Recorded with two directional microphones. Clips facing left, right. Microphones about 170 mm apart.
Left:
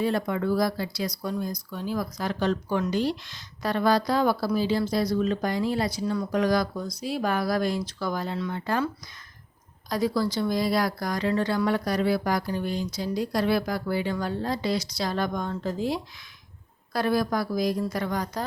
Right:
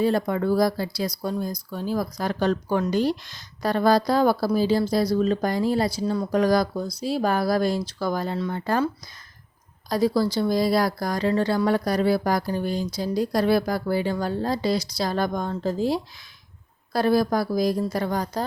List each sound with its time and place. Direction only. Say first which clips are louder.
0.0 s speech: right 4 dB; 35° right (ahead or behind)
9.9 s speech: right 4 dB; 35° right (ahead or behind)